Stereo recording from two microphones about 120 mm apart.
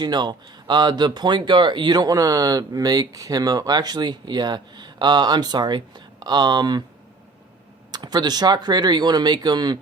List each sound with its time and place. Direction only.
0.0 s speech: 35° right (ahead or behind)
7.9 s speech: 35° right (ahead or behind)